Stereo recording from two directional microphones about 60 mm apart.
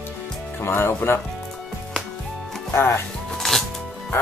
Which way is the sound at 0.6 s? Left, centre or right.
Left.